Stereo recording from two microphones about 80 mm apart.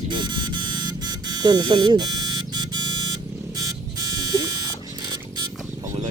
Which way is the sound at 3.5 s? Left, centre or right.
Right.